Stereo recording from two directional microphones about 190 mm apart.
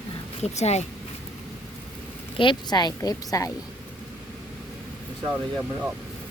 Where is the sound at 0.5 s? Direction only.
35° left (ahead or behind).